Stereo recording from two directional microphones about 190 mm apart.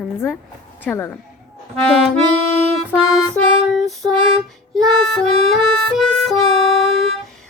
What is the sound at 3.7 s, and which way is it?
Female singing, centre (ahead or behind).